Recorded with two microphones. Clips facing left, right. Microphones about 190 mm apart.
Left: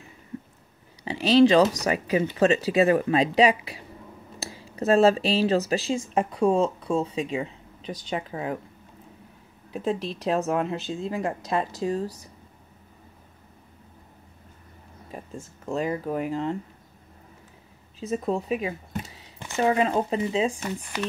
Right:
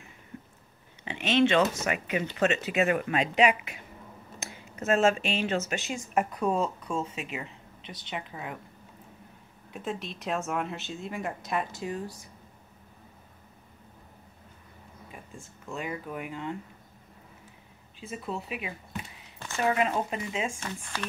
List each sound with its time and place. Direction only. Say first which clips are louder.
1.0 s speech: left 7 dB; 35° left (ahead or behind)
9.7 s a woman's voice: left 8 dB; 35° left (ahead or behind)
15.0 s speech: left 9 dB; 40° left (ahead or behind)
18.0 s speech: left 9 dB; 40° left (ahead or behind)
19.6 s speech: left 5 dB; 30° left (ahead or behind)
20.6 s speech: left 5 dB; 15° left (ahead or behind)